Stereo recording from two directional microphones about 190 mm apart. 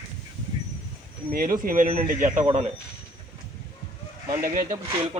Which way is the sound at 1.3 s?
45° right (ahead or behind).